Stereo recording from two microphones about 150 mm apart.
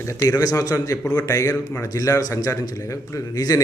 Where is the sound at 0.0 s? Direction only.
20° left (ahead or behind).